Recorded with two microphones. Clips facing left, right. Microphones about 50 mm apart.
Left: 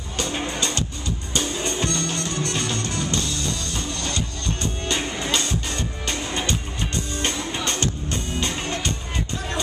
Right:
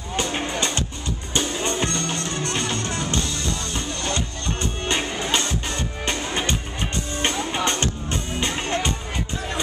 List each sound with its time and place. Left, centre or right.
0.1 s music: right